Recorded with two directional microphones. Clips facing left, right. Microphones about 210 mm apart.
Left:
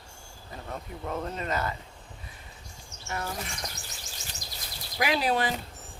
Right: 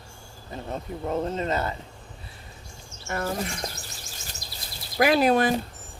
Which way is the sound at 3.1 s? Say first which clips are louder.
Right 6 dB; 55° right (ahead or behind).